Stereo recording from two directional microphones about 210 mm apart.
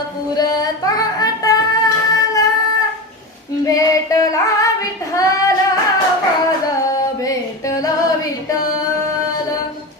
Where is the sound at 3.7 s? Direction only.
15° left (ahead or behind).